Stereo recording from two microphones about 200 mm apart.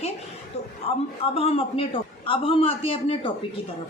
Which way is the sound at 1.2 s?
30° left (ahead or behind).